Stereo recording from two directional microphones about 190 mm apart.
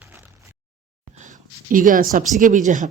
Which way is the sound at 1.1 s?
40° right (ahead or behind).